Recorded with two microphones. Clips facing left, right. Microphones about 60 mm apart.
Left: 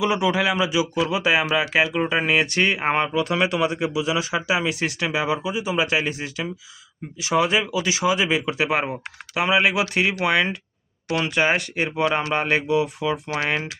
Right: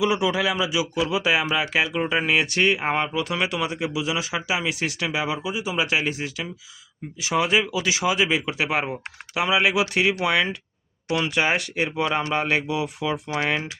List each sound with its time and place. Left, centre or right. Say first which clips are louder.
0.0 s speech: left 1 dB; left
3.4 s speech: left 4 dB; left
13.3 s speech: even; left